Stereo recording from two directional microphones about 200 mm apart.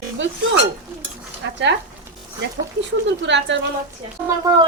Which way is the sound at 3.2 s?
60° right (ahead or behind).